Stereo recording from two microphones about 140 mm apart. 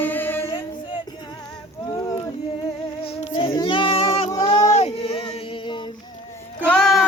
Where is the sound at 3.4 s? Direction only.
30° left (ahead or behind).